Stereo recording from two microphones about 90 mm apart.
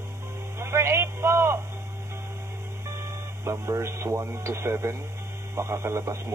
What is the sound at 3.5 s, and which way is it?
A man's voice, 35° right (ahead or behind).